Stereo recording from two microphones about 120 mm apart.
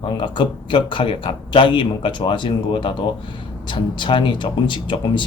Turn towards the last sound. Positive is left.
turn(degrees=45)  # may be behind; listen again after turning